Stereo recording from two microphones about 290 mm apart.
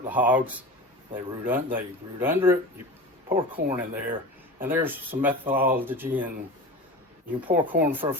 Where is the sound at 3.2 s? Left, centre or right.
Centre.